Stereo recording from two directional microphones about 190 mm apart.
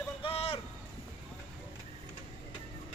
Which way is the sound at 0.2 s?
30° left (ahead or behind).